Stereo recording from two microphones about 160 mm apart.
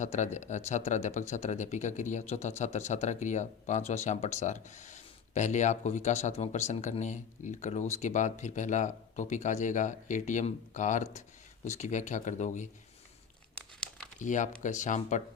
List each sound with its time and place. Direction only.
0.0 s speech: 50° left (ahead or behind)
13.7 s crumpling: 5° left (ahead or behind)
14.2 s speech: 50° left (ahead or behind)